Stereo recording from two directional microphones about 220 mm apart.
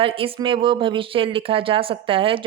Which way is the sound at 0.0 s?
25° right (ahead or behind).